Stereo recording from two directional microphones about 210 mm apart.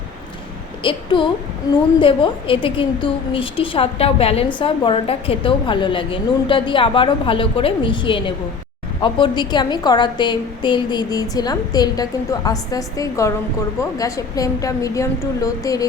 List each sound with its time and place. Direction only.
0.8 s a woman's voice: 25° left (ahead or behind)